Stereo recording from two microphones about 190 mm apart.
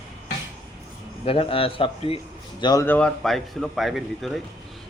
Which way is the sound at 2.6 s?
20° left (ahead or behind).